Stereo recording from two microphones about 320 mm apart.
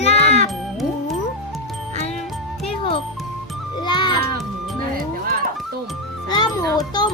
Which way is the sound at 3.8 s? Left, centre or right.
Centre.